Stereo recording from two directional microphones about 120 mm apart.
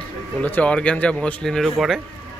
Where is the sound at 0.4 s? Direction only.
10° left (ahead or behind).